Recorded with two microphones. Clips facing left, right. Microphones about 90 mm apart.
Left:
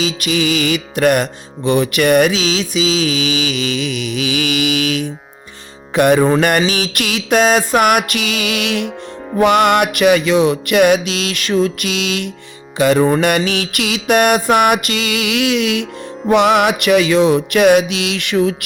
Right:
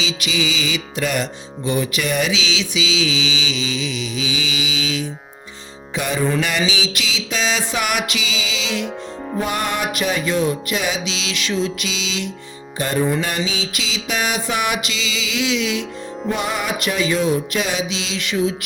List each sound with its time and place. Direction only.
0.0 s music: 50° left (ahead or behind)
6.2 s mantra: 45° left (ahead or behind)
6.7 s music: 55° left (ahead or behind)
9.4 s music: 75° left (ahead or behind); by 12.3 s 55° left (ahead or behind)
12.7 s music: 90° left
13.1 s music: 65° left (ahead or behind)
16.3 s music: 80° left; by 18.5 s 60° left (ahead or behind)